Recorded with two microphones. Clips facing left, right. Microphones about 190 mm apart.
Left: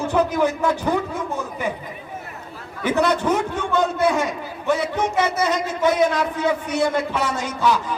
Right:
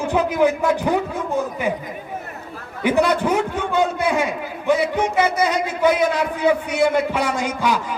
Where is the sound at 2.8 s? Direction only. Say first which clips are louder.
Right 2 dB; 10° right (ahead or behind).